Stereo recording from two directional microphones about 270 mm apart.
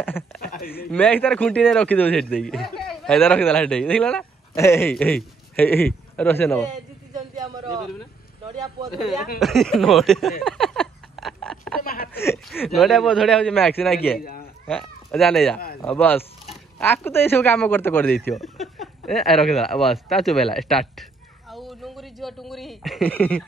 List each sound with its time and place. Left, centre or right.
0.0 s speech: centre
0.5 s speech: left
0.9 s a man's voice: centre
6.7 s a sound: centre
9.4 s a man's voice: centre
10.4 s a sound: centre
11.8 s speech: left
12.1 s a man's voice: centre
14.2 s speech: left
14.7 s speech: centre